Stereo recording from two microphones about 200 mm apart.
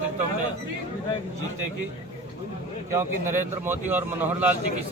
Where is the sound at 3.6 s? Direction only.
10° right (ahead or behind).